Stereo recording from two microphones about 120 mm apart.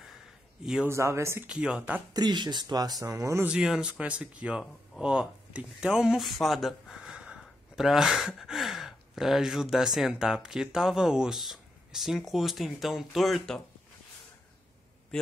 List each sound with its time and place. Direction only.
0.8 s speech: 25° right (ahead or behind)
1.5 s speech: 5° right (ahead or behind)
2.1 s speech: 35° right (ahead or behind)
3.4 s speech: 5° right (ahead or behind)